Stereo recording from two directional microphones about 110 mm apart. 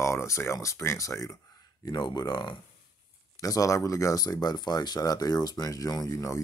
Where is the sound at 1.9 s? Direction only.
40° left (ahead or behind).